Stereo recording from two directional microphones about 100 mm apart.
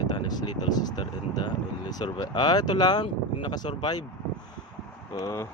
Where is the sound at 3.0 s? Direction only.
55° left (ahead or behind).